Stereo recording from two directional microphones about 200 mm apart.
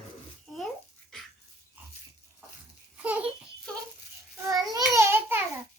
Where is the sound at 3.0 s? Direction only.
5° right (ahead or behind).